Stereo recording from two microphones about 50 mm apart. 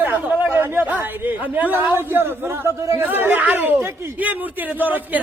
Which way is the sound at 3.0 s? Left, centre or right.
Right.